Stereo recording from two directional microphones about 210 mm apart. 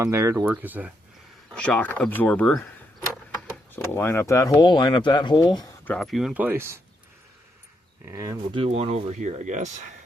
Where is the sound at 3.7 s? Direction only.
10° left (ahead or behind).